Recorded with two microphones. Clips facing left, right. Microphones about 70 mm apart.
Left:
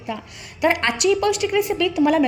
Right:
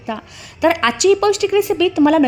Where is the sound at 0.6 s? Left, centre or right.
Right.